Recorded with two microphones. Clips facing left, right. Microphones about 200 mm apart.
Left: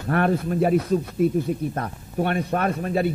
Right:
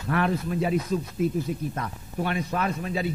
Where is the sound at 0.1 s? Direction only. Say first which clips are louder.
Left 4 dB; 50° left (ahead or behind).